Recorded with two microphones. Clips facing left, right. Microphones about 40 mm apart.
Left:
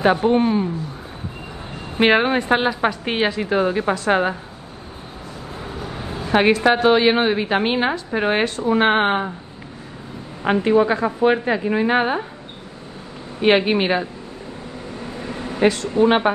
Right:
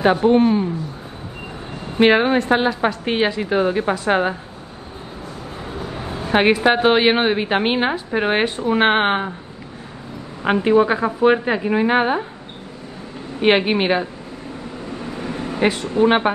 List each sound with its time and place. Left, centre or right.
0.2 s a woman's voice: centre
2.0 s a woman's voice: centre
3.1 s a woman's voice: centre
3.5 s a woman's voice: right
3.9 s a woman's voice: centre
5.7 s a sound: right
6.2 s a woman's voice: centre
8.5 s a woman's voice: right
10.5 s a woman's voice: centre
13.5 s a woman's voice: centre
15.0 s vehicle: right
15.6 s a woman's voice: right
15.9 s a woman's voice: right